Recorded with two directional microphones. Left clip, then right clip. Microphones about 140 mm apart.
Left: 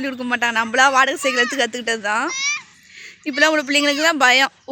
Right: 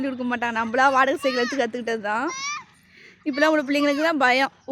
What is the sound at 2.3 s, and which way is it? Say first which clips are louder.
Speech: left 7 dB; 45° right (ahead or behind).